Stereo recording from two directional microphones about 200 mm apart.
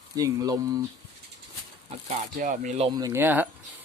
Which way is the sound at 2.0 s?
40° right (ahead or behind).